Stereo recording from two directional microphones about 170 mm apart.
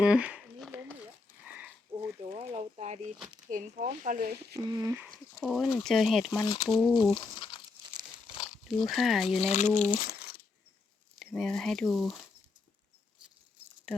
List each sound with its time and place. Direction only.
0.0 s speech: 5° right (ahead or behind)
2.3 s a sound: 40° right (ahead or behind)
3.5 s speech: 50° right (ahead or behind)
4.5 s speech: 20° right (ahead or behind)
5.4 s speech: centre (ahead or behind)
6.3 s speech: 20° left (ahead or behind)
6.7 s speech: centre (ahead or behind)
6.9 s speech: 25° left (ahead or behind)
8.6 s speech: centre (ahead or behind)
9.4 s speech: 45° left (ahead or behind)
10.1 s crumpling: 65° left (ahead or behind)
11.3 s speech: 5° left (ahead or behind)